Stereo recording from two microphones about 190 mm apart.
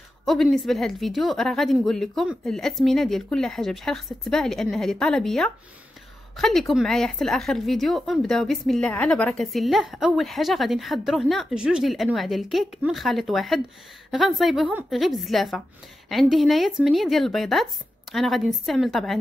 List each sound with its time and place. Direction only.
0.2 s a woman's voice: centre (ahead or behind)